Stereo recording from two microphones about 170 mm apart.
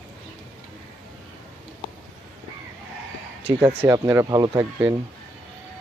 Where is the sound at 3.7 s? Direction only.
15° right (ahead or behind).